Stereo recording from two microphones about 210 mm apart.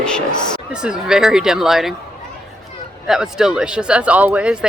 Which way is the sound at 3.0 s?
5° right (ahead or behind).